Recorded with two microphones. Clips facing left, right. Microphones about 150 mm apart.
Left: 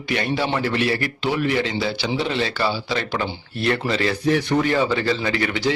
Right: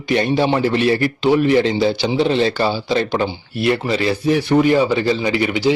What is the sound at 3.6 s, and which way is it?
A man's voice, 10° right (ahead or behind).